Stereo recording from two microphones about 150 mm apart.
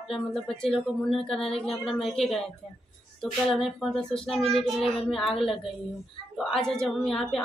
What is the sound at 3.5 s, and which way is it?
A woman's voice, centre (ahead or behind).